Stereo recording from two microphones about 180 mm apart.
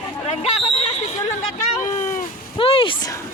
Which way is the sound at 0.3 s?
35° left (ahead or behind).